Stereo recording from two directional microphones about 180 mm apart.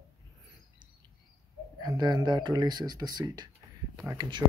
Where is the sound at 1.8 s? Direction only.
20° right (ahead or behind).